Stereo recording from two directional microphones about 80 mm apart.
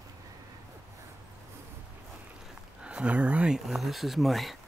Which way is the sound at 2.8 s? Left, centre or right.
Centre.